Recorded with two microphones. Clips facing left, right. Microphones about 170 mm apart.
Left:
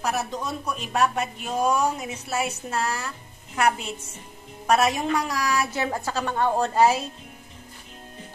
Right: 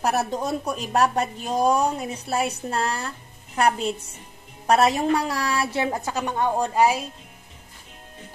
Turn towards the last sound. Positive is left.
turn(degrees=-10)  # may be behind; listen again after turning